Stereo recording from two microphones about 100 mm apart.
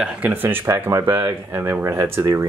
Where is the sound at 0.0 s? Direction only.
10° right (ahead or behind).